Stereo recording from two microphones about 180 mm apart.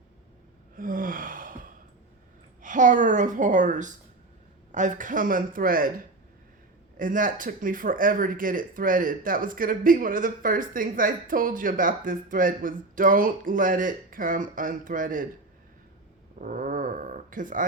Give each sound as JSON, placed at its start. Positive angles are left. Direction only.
{"t": 0.8, "sound": "gasp", "side_deg": -50}
{"t": 2.6, "sound": "speech", "side_deg": -45}
{"t": 6.9, "sound": "speech", "side_deg": -50}
{"t": 16.4, "sound": "dog", "side_deg": -50}